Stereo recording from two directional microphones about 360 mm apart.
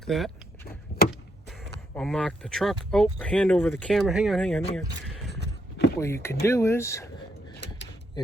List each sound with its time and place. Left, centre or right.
0.0 s vehicle: centre
2.0 s speech: centre
5.3 s a sound: left
6.2 s speech: centre